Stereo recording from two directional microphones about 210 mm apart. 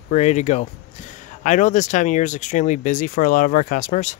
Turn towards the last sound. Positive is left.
turn(degrees=35)  # may be behind; listen again after turning